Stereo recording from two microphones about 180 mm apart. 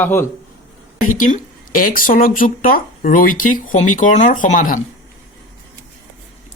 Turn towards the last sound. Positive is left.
turn(degrees=45)  # may be behind; listen again after turning